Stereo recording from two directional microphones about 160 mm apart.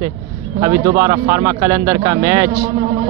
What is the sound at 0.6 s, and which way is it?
Speech, 20° right (ahead or behind).